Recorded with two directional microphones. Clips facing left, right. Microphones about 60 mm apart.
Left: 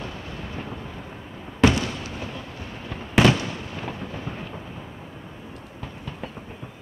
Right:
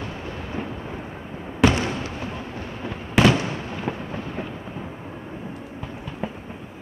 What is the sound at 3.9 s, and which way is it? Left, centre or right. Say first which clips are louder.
Thunder: right 8 dB; centre.